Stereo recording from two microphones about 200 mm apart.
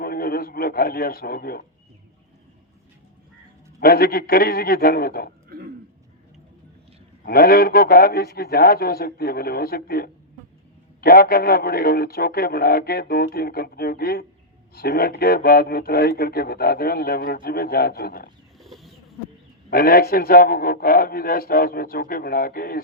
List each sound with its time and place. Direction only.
0.0 s a man's voice: 50° left (ahead or behind)
3.8 s speech: 50° left (ahead or behind)
5.5 s a sound: 50° right (ahead or behind)
7.3 s speech: 50° left (ahead or behind)
18.6 s bird: centre (ahead or behind)
19.7 s speech: 50° left (ahead or behind)